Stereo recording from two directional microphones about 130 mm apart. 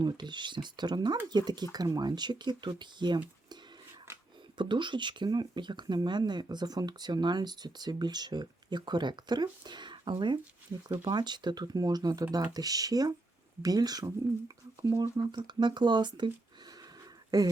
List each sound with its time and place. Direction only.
0.0 s speech: 35° right (ahead or behind)
4.5 s speech: 35° right (ahead or behind)